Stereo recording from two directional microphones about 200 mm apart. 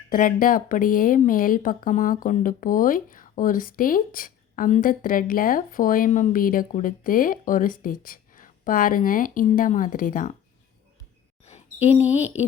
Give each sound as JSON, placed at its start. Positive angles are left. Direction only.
{"t": 0.1, "sound": "speech", "side_deg": 45}
{"t": 11.4, "sound": "speech", "side_deg": 35}